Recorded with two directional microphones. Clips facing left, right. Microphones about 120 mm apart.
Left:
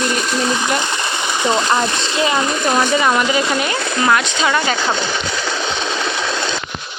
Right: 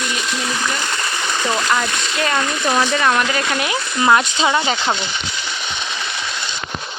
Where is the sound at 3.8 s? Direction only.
70° left (ahead or behind).